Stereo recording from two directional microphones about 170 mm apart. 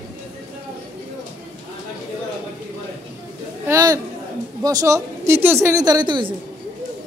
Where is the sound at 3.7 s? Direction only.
20° right (ahead or behind).